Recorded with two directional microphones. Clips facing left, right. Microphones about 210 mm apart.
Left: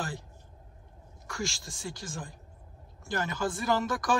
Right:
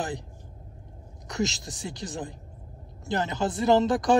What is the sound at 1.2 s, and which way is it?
Speech, 20° right (ahead or behind).